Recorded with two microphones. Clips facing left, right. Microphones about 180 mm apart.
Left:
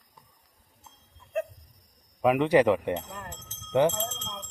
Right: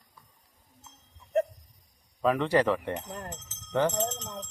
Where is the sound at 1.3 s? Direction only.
35° right (ahead or behind).